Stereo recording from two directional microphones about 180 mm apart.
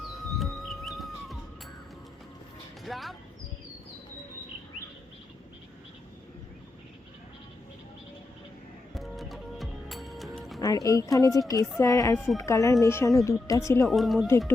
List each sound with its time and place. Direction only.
0.3 s music: centre (ahead or behind)
2.8 s speech: centre (ahead or behind)
9.0 s music: centre (ahead or behind)
10.6 s speech: 20° left (ahead or behind)
13.8 s speech: centre (ahead or behind)
14.3 s speech: 15° left (ahead or behind)